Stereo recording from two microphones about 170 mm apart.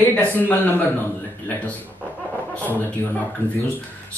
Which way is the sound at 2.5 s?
10° left (ahead or behind).